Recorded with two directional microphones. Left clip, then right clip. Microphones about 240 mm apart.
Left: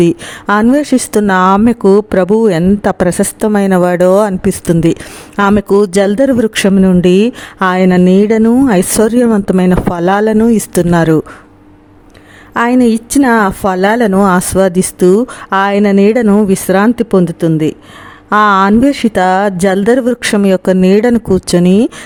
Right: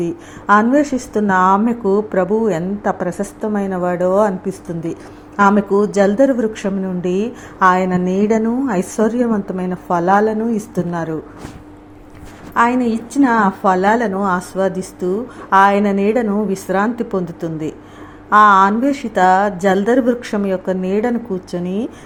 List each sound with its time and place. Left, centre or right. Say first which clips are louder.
0.0 s speech: left 11 dB; left
12.5 s speech: left 5 dB; left